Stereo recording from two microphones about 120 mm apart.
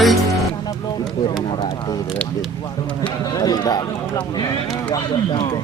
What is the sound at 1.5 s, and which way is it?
Speech, 40° left (ahead or behind).